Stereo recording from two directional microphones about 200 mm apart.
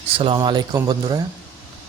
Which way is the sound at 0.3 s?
20° right (ahead or behind).